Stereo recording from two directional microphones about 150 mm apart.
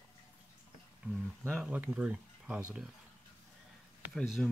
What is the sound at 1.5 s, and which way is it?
Speech, 10° right (ahead or behind).